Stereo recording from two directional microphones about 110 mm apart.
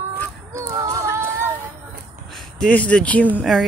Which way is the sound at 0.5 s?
30° right (ahead or behind).